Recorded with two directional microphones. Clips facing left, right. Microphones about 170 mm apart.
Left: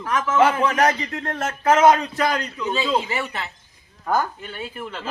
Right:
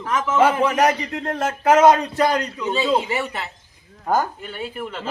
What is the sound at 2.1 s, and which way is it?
Speech, 35° right (ahead or behind).